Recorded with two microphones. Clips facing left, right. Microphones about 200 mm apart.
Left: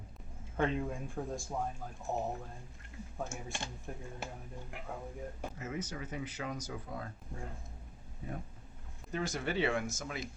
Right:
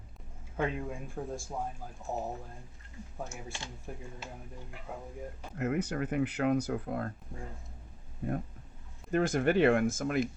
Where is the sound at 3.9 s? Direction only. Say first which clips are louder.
Right 3 dB; 5° right (ahead or behind).